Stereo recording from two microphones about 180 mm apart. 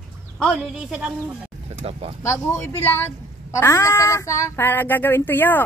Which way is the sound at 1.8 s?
35° right (ahead or behind).